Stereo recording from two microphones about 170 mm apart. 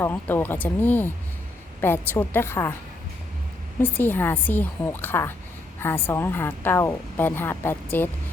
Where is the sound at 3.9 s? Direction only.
10° left (ahead or behind).